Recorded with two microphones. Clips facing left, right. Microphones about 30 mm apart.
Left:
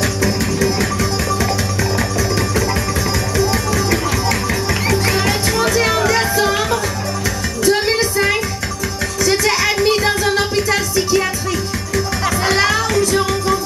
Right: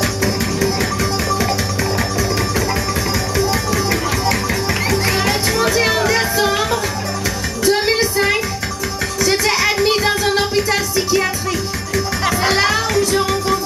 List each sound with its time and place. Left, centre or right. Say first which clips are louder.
0.0 s music: left 1 dB; centre
3.3 s music: left 1 dB; centre